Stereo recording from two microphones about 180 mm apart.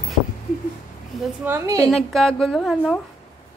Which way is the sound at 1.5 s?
15° right (ahead or behind).